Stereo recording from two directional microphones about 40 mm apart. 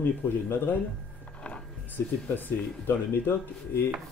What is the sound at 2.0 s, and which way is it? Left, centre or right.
Speech, left.